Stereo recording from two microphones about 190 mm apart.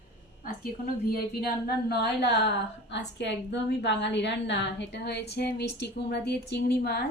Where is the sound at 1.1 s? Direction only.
55° left (ahead or behind).